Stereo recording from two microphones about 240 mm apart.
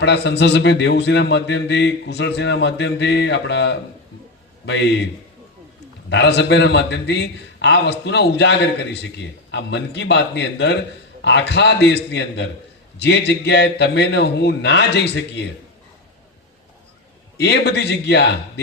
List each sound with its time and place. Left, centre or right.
0.0 s a man's voice: left
6.1 s a man's voice: left
17.3 s a man's voice: left